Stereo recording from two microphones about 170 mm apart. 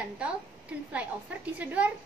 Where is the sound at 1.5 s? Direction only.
10° right (ahead or behind).